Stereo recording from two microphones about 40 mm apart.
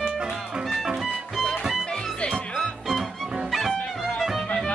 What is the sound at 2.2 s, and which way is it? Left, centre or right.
Music, left.